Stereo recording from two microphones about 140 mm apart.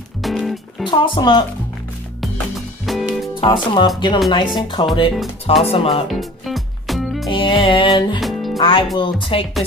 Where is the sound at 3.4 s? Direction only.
35° left (ahead or behind).